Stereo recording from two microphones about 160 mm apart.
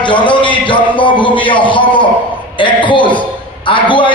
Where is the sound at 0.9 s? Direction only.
30° left (ahead or behind).